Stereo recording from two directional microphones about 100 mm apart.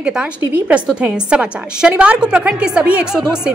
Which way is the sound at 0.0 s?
10° right (ahead or behind).